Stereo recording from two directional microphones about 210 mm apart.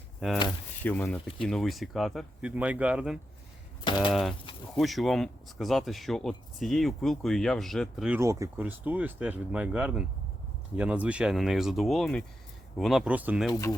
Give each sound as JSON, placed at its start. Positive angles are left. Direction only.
{"t": 0.9, "sound": "speech", "side_deg": 10}
{"t": 3.8, "sound": "speech", "side_deg": 20}
{"t": 4.1, "sound": "speech", "side_deg": 0}
{"t": 8.2, "sound": "speech", "side_deg": -15}
{"t": 13.5, "sound": "speech", "side_deg": 15}